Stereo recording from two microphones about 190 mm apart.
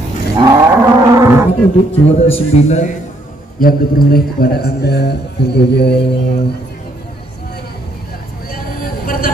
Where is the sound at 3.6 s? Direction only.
50° left (ahead or behind).